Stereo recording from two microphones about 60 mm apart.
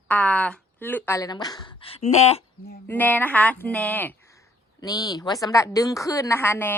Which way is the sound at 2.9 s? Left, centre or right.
Left.